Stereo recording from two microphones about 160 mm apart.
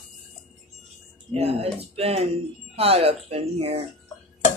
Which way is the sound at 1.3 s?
40° right (ahead or behind).